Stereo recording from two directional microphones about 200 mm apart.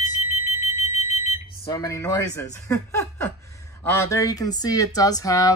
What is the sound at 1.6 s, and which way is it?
Speech, 15° left (ahead or behind).